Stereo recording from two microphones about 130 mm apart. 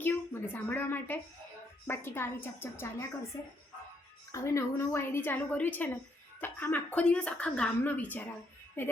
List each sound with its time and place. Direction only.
0.0 s a woman's voice: 15° left (ahead or behind)
4.3 s a woman's voice: 20° left (ahead or behind)